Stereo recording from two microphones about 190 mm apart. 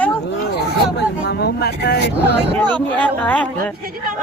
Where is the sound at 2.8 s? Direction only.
10° left (ahead or behind).